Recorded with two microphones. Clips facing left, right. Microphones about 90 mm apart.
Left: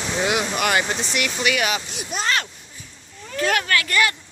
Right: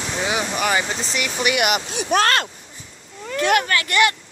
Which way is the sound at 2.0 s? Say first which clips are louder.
Right 8 dB; 60° right (ahead or behind).